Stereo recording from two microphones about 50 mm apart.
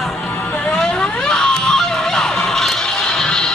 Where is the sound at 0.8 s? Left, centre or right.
Centre.